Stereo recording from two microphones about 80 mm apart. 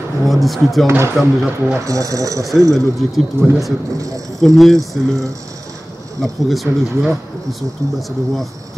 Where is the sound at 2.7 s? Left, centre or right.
Centre.